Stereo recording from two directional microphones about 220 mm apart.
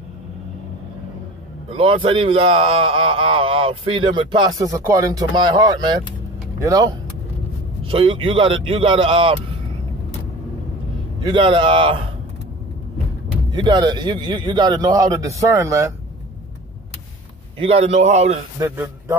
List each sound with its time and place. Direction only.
1.7 s a man's voice: 25° right (ahead or behind)
7.8 s speech: 25° right (ahead or behind)
11.2 s speech: 20° right (ahead or behind)
13.5 s speech: 20° right (ahead or behind)
17.6 s speech: 25° right (ahead or behind)
18.6 s a man's voice: 10° right (ahead or behind)